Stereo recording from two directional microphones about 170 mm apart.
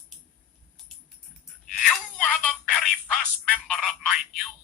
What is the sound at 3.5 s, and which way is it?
Telephone, 5° left (ahead or behind).